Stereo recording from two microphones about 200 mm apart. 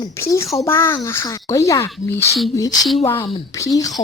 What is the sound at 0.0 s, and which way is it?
Speech, 15° left (ahead or behind).